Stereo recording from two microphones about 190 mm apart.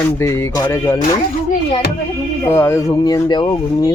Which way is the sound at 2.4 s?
15° left (ahead or behind).